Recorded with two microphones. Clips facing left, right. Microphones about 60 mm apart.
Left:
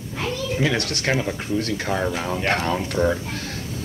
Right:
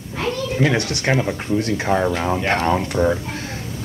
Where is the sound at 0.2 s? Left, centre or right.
Centre.